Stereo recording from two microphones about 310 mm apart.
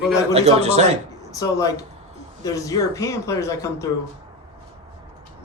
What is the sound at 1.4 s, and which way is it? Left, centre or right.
Speech, centre.